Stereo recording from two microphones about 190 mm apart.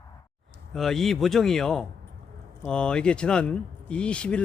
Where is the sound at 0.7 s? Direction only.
Centre (ahead or behind).